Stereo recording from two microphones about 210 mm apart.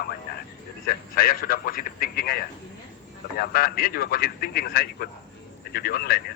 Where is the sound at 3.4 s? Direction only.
45° left (ahead or behind).